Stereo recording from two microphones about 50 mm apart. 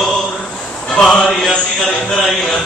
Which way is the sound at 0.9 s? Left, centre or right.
Centre.